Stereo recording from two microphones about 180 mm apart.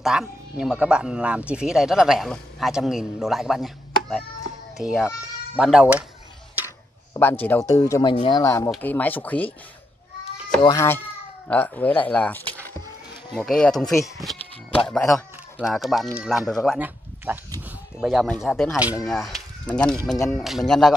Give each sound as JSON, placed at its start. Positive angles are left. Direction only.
{"t": 0.0, "sound": "speech", "side_deg": -5}
{"t": 7.2, "sound": "speech", "side_deg": 10}
{"t": 10.6, "sound": "speech", "side_deg": 20}
{"t": 13.5, "sound": "speech", "side_deg": 5}
{"t": 18.0, "sound": "speech", "side_deg": 0}